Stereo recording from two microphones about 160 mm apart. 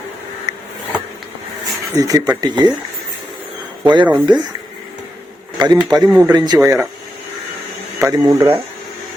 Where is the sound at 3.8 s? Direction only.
30° right (ahead or behind).